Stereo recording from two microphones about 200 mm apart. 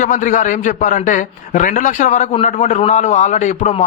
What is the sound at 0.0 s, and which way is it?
A man's voice, 40° left (ahead or behind).